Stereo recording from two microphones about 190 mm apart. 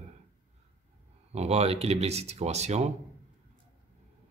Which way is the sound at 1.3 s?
35° right (ahead or behind).